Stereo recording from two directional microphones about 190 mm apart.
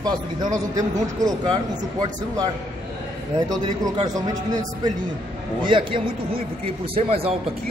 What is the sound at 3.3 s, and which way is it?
Speech, 20° right (ahead or behind).